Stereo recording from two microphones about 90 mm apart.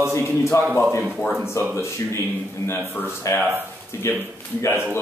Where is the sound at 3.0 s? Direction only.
25° left (ahead or behind).